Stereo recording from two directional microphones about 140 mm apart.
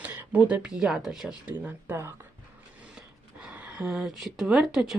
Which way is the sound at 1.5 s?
15° right (ahead or behind).